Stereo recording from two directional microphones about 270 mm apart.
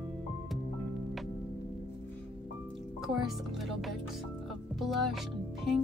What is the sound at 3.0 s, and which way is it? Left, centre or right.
A woman's voice, centre.